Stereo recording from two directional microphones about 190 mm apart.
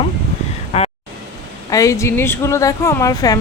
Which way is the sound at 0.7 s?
35° left (ahead or behind).